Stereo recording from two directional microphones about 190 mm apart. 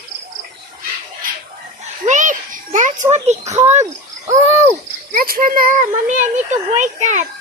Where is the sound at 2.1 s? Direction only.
40° right (ahead or behind).